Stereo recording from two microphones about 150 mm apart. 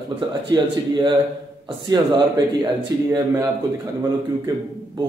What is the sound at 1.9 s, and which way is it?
Speech, 25° right (ahead or behind).